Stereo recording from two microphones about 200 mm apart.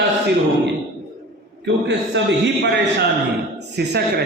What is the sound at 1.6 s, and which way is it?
Mantra, 60° right (ahead or behind).